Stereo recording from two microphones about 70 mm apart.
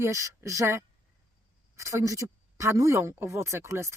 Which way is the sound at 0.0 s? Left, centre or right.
Right.